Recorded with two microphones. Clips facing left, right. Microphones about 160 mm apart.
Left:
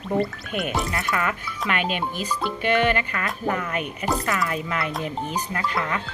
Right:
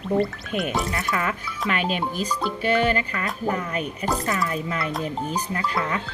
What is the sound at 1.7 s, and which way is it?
Speech, 35° right (ahead or behind).